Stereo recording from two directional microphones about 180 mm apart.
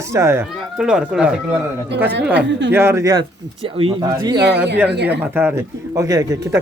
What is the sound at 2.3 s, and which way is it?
Speech, 75° right (ahead or behind).